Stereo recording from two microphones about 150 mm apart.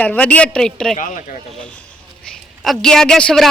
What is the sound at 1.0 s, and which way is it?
Speech, 60° left (ahead or behind).